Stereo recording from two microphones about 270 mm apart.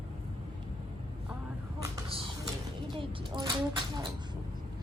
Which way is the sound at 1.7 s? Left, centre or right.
Centre.